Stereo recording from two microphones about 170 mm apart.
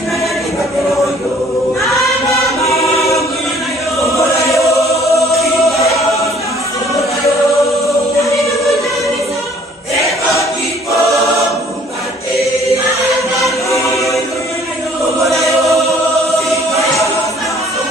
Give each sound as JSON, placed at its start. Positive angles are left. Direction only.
{"t": 2.3, "sound": "choir", "side_deg": 20}
{"t": 5.3, "sound": "choir", "side_deg": 0}
{"t": 13.4, "sound": "music", "side_deg": 20}